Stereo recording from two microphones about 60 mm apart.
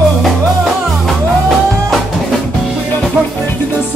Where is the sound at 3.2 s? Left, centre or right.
Right.